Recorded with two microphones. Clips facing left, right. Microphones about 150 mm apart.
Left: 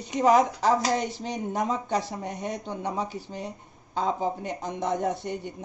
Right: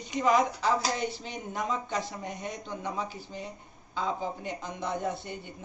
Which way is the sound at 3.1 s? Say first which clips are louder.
Left 4 dB; 80° left.